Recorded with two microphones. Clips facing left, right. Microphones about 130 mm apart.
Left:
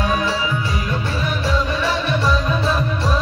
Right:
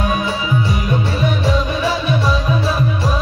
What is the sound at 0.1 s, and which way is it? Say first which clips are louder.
Music: right 1 dB; 15° right (ahead or behind).